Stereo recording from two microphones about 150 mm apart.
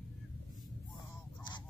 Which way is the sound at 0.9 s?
30° left (ahead or behind).